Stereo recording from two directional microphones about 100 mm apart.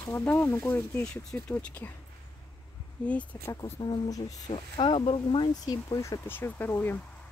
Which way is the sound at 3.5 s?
40° left (ahead or behind).